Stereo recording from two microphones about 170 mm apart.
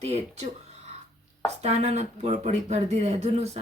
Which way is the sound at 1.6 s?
40° right (ahead or behind).